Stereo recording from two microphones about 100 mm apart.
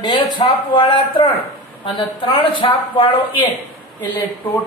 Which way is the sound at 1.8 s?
50° left (ahead or behind).